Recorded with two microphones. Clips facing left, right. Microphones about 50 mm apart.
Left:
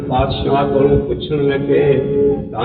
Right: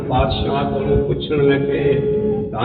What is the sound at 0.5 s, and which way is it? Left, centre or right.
Speech, centre.